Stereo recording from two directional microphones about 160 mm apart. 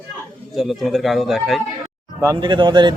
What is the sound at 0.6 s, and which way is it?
Speech, centre (ahead or behind).